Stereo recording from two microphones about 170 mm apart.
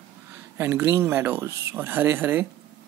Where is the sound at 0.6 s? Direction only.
15° right (ahead or behind).